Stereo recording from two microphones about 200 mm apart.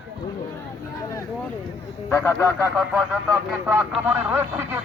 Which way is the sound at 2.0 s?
10° left (ahead or behind).